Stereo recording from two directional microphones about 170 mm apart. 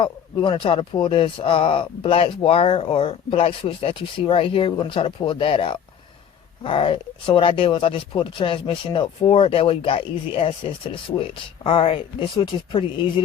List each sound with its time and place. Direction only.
0.0 s speech: 30° left (ahead or behind)